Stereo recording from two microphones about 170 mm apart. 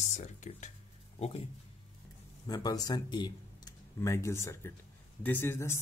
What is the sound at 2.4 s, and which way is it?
Speech, 20° left (ahead or behind).